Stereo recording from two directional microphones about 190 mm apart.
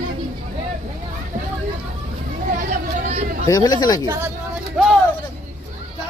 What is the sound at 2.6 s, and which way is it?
Hubbub, 35° right (ahead or behind).